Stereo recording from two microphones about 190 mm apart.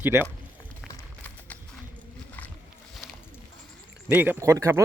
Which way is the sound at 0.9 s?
10° left (ahead or behind).